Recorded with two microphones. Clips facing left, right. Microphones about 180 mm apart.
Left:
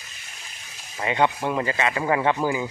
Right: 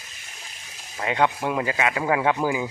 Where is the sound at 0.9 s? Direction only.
Centre (ahead or behind).